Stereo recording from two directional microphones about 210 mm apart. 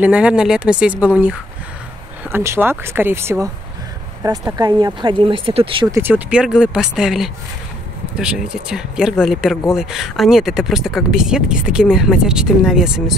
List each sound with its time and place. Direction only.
0.0 s speech: 5° right (ahead or behind)
2.3 s speech: 10° right (ahead or behind)
5.9 s speech: 10° right (ahead or behind)